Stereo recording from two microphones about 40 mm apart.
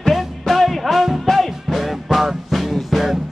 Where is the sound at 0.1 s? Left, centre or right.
Centre.